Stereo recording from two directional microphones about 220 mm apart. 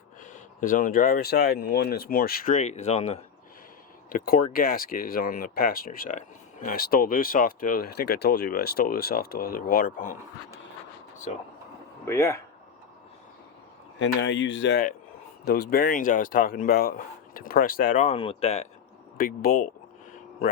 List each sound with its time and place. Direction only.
0.2 s speech: 35° left (ahead or behind)
4.1 s speech: 40° left (ahead or behind)
11.3 s speech: 30° left (ahead or behind)
12.0 s speech: 15° left (ahead or behind)
14.0 s speech: 55° left (ahead or behind); by 18.6 s 30° left (ahead or behind)
19.1 s speech: 40° left (ahead or behind)